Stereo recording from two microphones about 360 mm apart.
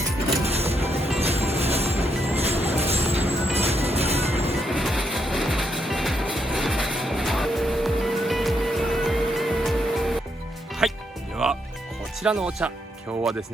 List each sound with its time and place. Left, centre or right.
0.4 s music: centre
4.5 s music: centre
12.2 s speech: centre